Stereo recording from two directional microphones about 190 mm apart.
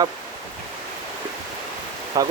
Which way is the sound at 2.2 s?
20° right (ahead or behind).